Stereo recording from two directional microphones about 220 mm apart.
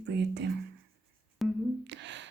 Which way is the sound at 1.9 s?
55° right (ahead or behind).